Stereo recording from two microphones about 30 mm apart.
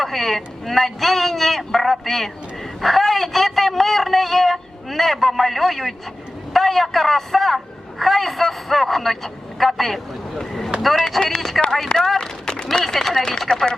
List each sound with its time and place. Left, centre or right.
0.0 s a man's voice: centre
11.0 s a man's voice: centre
11.3 s a man's voice: centre
13.5 s speech: left